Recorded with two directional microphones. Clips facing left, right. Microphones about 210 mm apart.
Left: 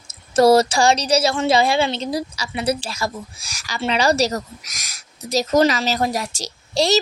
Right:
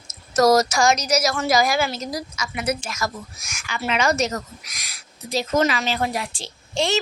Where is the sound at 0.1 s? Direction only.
30° left (ahead or behind).